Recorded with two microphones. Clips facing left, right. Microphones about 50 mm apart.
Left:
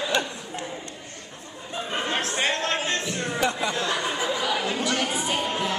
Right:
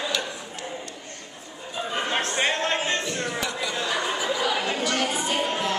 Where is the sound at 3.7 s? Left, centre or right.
Centre.